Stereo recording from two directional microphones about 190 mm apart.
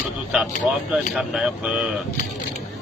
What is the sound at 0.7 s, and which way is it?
Speech, 5° right (ahead or behind).